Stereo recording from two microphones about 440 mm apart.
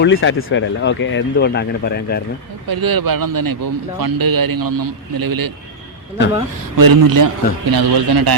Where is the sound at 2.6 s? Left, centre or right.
Right.